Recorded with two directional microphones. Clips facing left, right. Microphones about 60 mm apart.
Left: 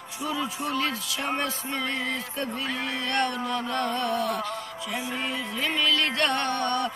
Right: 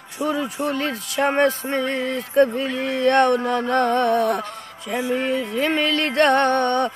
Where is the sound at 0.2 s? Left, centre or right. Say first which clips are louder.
Right 7 dB; right.